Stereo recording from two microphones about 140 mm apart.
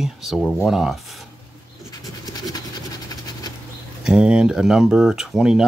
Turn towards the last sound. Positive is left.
turn(degrees=-5)  # may be behind; listen again after turning